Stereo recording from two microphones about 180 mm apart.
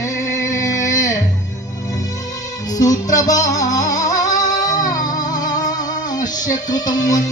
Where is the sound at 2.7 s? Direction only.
20° left (ahead or behind).